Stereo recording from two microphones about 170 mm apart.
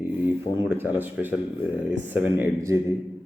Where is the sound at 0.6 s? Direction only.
10° right (ahead or behind).